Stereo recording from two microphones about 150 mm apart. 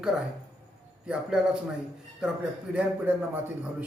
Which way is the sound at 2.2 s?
5° right (ahead or behind).